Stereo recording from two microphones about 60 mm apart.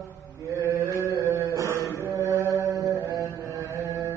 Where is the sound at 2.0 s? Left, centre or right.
Right.